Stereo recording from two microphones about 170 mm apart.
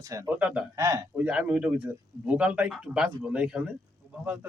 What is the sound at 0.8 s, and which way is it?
A man's voice, 20° right (ahead or behind).